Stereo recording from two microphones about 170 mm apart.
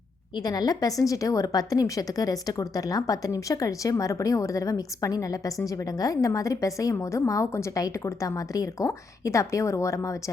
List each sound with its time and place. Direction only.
0.3 s a woman's voice: 25° left (ahead or behind)